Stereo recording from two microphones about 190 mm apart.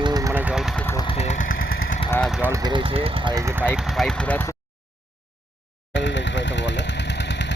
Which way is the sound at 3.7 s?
5° left (ahead or behind).